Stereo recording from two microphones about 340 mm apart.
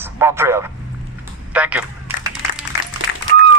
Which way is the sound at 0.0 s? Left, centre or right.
Centre.